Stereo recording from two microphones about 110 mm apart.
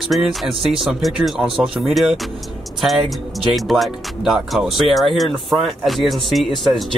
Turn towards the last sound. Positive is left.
turn(degrees=0)  # may be behind; listen again after turning